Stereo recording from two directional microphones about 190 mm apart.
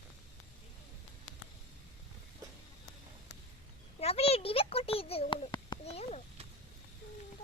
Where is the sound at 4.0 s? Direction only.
30° left (ahead or behind).